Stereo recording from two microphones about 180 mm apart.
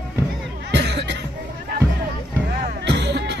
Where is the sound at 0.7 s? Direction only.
70° right (ahead or behind).